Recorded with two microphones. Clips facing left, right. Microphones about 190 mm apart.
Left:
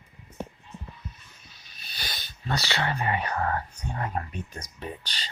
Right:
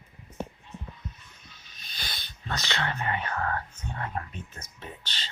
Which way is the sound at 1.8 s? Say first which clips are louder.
Left 2 dB; 10° left (ahead or behind).